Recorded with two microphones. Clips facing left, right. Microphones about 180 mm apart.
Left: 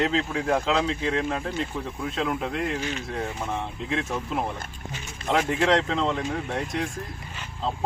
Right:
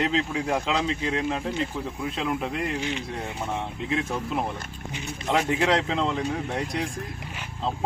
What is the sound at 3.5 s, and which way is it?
Speech, 5° right (ahead or behind).